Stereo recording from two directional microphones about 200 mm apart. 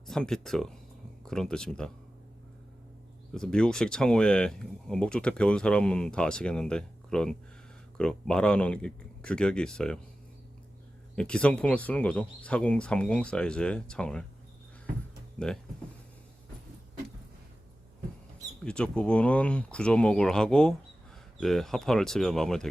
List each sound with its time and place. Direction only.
0.1 s speech: 5° left (ahead or behind)
3.3 s speech: 5° left (ahead or behind)
11.1 s speech: 5° left (ahead or behind)
18.6 s speech: 5° left (ahead or behind)